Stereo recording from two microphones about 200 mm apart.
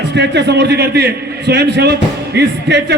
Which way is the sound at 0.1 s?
60° right (ahead or behind).